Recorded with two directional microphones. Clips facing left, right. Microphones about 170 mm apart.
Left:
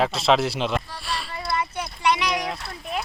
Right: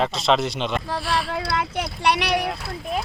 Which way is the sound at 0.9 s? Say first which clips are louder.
Right 7 dB; 75° right (ahead or behind).